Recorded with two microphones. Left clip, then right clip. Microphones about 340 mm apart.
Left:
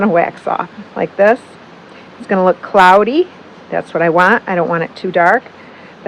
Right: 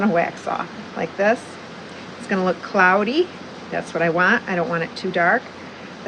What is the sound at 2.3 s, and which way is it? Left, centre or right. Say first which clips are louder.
Speech: left 9 dB; centre.